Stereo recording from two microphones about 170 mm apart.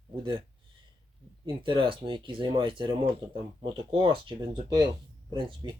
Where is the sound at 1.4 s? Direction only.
30° right (ahead or behind).